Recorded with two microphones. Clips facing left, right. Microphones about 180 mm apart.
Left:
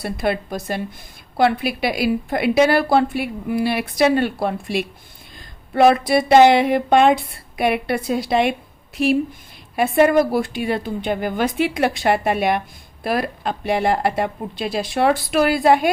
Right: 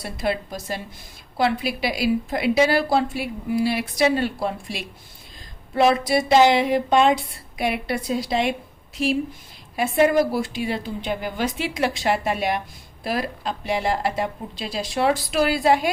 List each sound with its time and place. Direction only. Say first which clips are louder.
0.0 s a woman's voice: left 3 dB; 60° left (ahead or behind)